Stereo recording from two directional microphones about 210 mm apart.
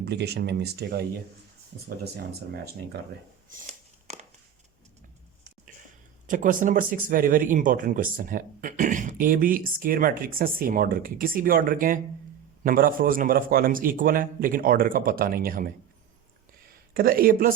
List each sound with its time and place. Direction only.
0.0 s a man's voice: 50° right (ahead or behind)
3.5 s a sound: 30° right (ahead or behind)
6.2 s a man's voice: 40° right (ahead or behind)
16.9 s a man's voice: 45° right (ahead or behind)